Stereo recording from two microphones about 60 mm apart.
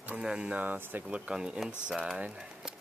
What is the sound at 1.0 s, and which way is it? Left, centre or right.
Speech, centre.